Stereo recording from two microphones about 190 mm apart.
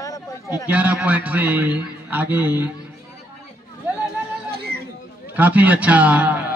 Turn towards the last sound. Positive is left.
turn(degrees=-10)  # may be behind; listen again after turning